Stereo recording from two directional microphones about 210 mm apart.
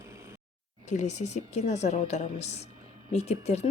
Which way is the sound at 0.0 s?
15° right (ahead or behind).